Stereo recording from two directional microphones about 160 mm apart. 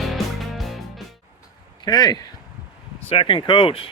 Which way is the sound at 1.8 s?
25° left (ahead or behind).